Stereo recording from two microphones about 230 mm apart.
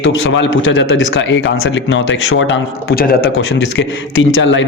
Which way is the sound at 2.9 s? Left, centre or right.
Left.